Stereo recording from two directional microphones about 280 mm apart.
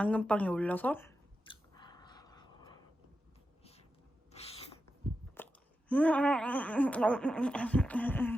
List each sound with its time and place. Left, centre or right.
0.0 s a sound: centre; by 4.7 s left
5.4 s chewing: centre
5.9 s laughter: centre